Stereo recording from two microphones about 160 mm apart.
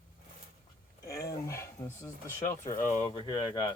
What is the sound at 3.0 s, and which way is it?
Speech, 30° left (ahead or behind).